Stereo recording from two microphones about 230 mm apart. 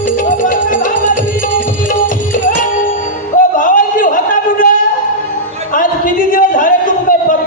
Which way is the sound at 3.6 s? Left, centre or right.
Left.